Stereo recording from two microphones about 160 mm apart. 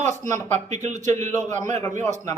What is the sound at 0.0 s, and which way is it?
Speech, 50° right (ahead or behind).